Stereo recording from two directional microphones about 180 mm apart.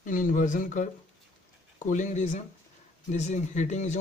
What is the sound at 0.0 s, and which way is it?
Speech, 45° left (ahead or behind).